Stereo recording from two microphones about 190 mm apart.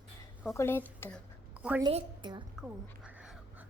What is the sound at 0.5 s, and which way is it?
Speech, 10° left (ahead or behind).